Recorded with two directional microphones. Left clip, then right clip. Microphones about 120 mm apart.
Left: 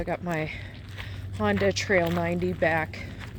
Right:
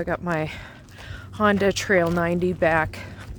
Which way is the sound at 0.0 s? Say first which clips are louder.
Right 4 dB; 90° right.